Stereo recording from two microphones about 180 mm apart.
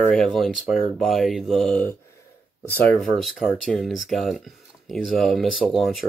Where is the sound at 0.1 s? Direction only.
Centre (ahead or behind).